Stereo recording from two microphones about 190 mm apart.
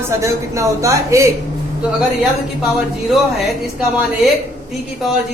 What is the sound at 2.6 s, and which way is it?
Speech, centre (ahead or behind).